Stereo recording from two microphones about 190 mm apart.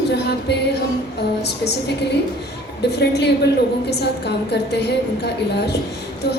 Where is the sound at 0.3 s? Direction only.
60° left (ahead or behind).